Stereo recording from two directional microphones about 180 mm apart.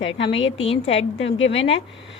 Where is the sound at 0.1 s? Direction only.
85° left.